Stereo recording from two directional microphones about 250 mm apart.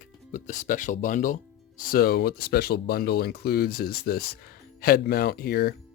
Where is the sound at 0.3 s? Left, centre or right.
Left.